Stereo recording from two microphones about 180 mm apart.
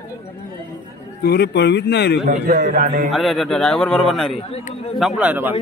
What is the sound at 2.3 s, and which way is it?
Speech, 45° right (ahead or behind).